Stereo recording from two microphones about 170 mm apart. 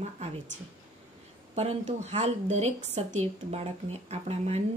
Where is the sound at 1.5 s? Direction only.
40° right (ahead or behind).